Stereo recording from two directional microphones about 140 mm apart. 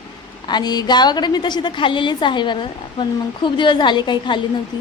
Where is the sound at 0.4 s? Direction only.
30° left (ahead or behind).